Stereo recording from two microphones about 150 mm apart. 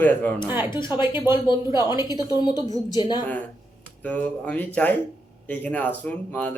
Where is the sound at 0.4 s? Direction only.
15° right (ahead or behind).